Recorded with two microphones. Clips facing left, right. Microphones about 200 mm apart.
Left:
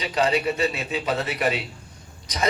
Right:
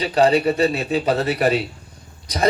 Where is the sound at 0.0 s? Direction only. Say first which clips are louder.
Right 6 dB; 35° right (ahead or behind).